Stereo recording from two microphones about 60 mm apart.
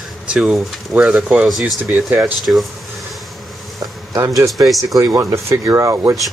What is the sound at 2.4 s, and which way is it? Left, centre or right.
Speech, centre.